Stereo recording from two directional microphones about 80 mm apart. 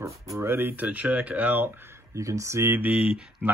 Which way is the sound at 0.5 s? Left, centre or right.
Right.